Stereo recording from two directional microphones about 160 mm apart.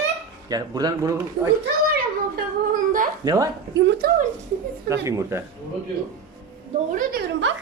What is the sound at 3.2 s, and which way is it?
Speech, 25° right (ahead or behind).